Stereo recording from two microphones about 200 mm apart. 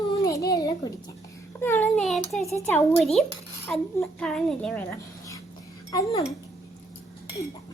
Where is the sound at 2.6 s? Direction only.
5° left (ahead or behind).